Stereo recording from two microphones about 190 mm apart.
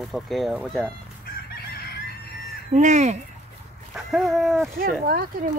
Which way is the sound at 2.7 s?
40° right (ahead or behind).